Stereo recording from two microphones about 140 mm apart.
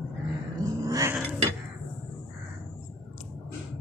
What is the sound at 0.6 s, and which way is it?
Cat, 25° right (ahead or behind).